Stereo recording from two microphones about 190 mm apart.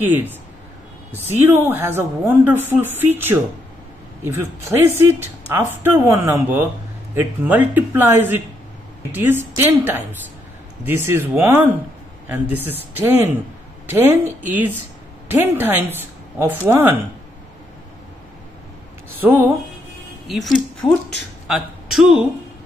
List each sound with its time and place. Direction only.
0.0 s speech: 10° right (ahead or behind)
4.7 s speech: 10° right (ahead or behind)
19.2 s speech: 10° right (ahead or behind)